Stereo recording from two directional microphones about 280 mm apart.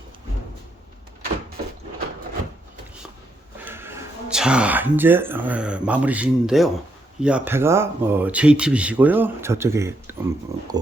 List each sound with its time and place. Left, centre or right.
3.6 s speech: centre